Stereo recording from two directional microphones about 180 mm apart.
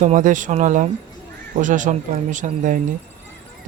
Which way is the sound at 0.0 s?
45° right (ahead or behind).